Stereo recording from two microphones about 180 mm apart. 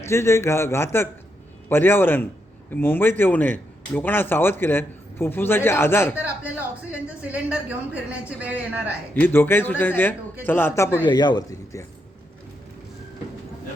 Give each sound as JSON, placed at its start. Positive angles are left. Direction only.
{"t": 0.0, "sound": "a man's voice", "side_deg": 15}
{"t": 6.1, "sound": "speech", "side_deg": -10}
{"t": 9.1, "sound": "a man's voice", "side_deg": 10}
{"t": 11.0, "sound": "a man's voice", "side_deg": 25}